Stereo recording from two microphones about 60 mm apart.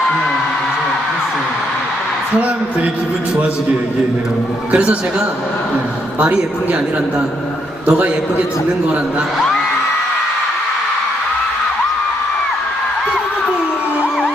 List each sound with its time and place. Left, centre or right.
2.3 s a woman's voice: right
4.7 s a woman's voice: right
6.1 s a woman's voice: right
7.9 s a woman's voice: right